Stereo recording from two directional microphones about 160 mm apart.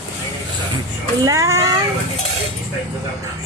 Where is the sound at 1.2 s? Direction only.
20° right (ahead or behind).